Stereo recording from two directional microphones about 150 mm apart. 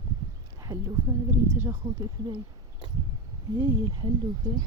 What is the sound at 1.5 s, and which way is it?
Speech, 15° right (ahead or behind).